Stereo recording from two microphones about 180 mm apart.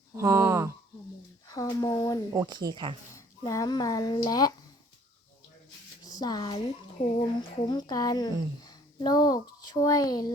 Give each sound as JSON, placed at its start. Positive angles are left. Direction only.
{"t": 0.2, "sound": "a sound", "side_deg": -15}
{"t": 1.5, "sound": "speech", "side_deg": 20}
{"t": 2.3, "sound": "speech", "side_deg": -20}
{"t": 3.2, "sound": "speech", "side_deg": 15}
{"t": 6.1, "sound": "speech", "side_deg": 20}